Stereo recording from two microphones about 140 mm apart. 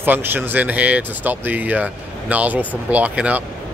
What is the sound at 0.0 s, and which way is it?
Speech, 15° right (ahead or behind).